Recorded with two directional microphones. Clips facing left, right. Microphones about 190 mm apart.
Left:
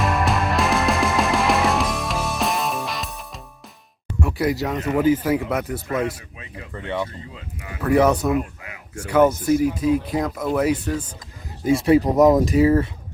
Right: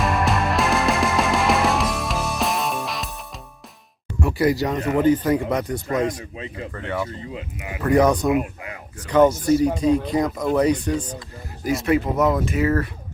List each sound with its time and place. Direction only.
0.0 s music: centre (ahead or behind)
4.2 s speech: centre (ahead or behind)
6.3 s speech: 30° right (ahead or behind)
6.7 s speech: 20° left (ahead or behind)
7.3 s speech: 15° right (ahead or behind)
7.9 s speech: 5° left (ahead or behind)
11.6 s speech: 30° left (ahead or behind)